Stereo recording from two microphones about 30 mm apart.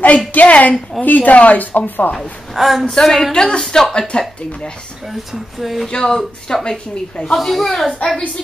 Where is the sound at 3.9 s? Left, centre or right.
Left.